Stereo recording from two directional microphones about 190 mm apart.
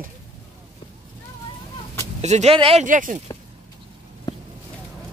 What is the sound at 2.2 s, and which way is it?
Speech, 35° right (ahead or behind).